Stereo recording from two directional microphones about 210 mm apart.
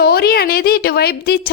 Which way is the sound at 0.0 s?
50° left (ahead or behind).